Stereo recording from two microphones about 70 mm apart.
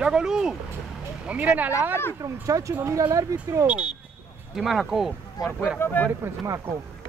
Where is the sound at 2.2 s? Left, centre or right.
Right.